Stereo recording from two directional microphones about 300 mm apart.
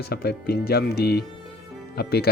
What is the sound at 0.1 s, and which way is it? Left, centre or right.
Speech, left.